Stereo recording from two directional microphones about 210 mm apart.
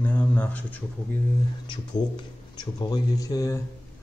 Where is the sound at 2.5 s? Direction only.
20° left (ahead or behind).